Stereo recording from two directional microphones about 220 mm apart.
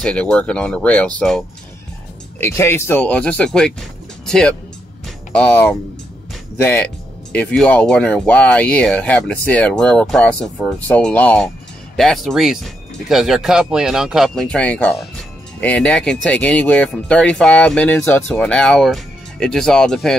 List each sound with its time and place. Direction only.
0.0 s speech: 5° left (ahead or behind)
2.4 s speech: 10° left (ahead or behind)
5.0 s music: 5° left (ahead or behind)
6.6 s speech: 10° left (ahead or behind)